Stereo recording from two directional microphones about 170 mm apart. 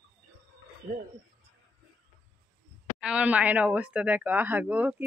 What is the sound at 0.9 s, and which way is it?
Speech, 60° right (ahead or behind).